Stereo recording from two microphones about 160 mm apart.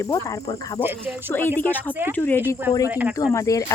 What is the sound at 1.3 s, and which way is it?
Speech, 10° left (ahead or behind).